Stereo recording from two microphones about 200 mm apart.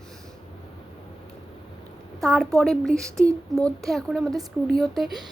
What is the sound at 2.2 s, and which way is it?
A woman's voice, centre (ahead or behind).